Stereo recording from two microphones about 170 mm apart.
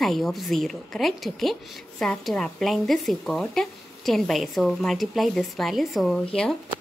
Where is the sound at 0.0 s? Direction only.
Centre (ahead or behind).